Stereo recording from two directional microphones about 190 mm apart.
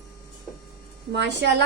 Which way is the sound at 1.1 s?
65° right (ahead or behind).